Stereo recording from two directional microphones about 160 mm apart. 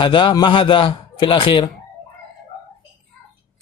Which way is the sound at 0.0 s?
30° left (ahead or behind).